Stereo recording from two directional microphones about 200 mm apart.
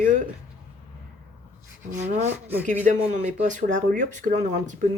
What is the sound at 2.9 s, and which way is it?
Speech, 40° right (ahead or behind).